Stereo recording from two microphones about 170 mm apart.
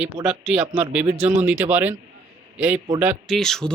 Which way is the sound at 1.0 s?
40° right (ahead or behind).